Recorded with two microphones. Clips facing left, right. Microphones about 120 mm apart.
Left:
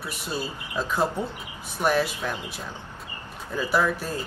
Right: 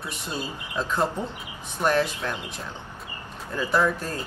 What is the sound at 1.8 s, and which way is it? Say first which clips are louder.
Speech: even; 5° left (ahead or behind).